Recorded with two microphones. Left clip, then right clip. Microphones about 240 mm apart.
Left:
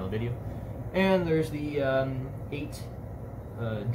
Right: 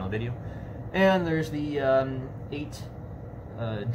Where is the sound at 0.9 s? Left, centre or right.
Right.